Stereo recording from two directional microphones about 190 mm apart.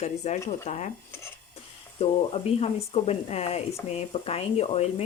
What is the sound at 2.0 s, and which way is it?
Speech, 30° left (ahead or behind).